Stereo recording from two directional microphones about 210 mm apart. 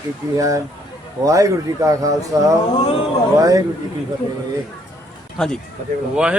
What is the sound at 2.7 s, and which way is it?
Speech, 25° left (ahead or behind).